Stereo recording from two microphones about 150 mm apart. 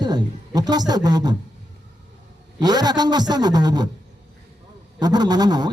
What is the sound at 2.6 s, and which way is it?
A man's voice, 25° right (ahead or behind).